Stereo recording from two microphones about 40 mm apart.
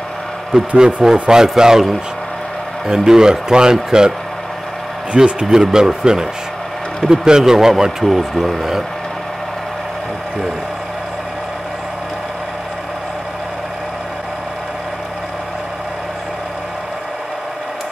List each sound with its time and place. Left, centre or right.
0.5 s speech: centre
2.9 s speech: centre
5.1 s speech: right
5.5 s speech: centre